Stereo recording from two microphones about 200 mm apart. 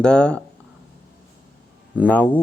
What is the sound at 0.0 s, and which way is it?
Speech, 5° left (ahead or behind).